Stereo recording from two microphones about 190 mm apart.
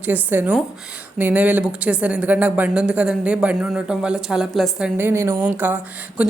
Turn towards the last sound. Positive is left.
turn(degrees=-10)  # may be behind; listen again after turning